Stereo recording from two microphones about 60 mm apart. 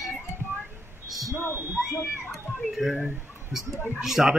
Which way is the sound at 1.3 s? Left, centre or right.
Left.